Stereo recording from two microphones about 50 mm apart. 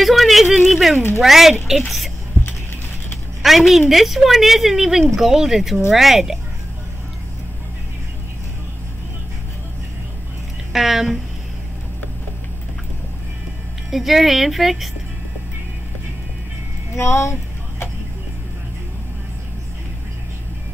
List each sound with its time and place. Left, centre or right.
0.0 s speech: centre
0.9 s speech: left
1.2 s a woman's voice: centre
3.4 s a woman's voice: centre
10.7 s a woman's voice: centre
13.8 s a woman's voice: centre
16.9 s a sound: left